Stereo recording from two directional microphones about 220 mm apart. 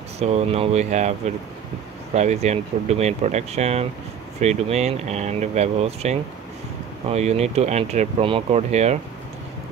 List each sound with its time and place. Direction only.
0.2 s speech: 30° right (ahead or behind)
2.1 s speech: 30° right (ahead or behind)